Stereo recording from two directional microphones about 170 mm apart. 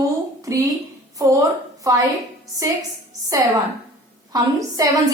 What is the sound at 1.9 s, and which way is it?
Speech, 20° right (ahead or behind).